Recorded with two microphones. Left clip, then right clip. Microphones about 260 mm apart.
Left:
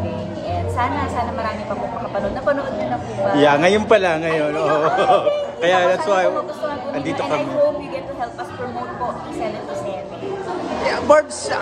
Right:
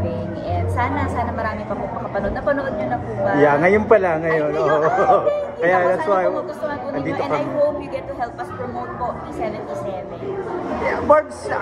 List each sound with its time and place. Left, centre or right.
0.7 s music: left
3.3 s speech: left
10.9 s a man's voice: centre